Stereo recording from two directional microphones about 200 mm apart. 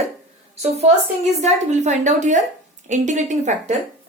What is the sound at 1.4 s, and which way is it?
Speech, 35° right (ahead or behind).